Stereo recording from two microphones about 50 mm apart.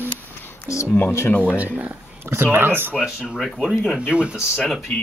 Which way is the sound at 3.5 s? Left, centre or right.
Centre.